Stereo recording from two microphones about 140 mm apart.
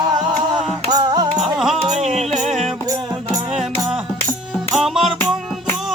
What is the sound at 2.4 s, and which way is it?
Music, centre (ahead or behind).